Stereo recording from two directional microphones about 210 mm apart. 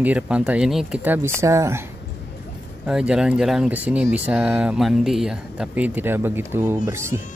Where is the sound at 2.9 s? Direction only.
5° right (ahead or behind).